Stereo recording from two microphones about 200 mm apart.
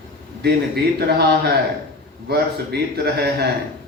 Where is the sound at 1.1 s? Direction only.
55° right (ahead or behind).